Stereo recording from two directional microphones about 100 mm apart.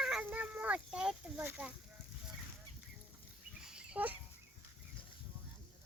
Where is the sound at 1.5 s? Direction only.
15° right (ahead or behind).